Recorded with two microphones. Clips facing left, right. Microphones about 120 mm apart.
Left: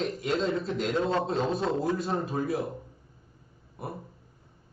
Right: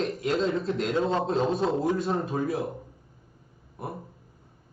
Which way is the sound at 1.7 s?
20° right (ahead or behind).